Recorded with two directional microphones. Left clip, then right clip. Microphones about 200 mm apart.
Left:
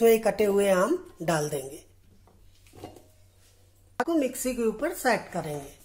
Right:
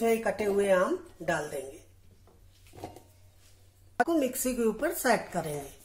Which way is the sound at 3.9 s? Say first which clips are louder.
Even; centre (ahead or behind).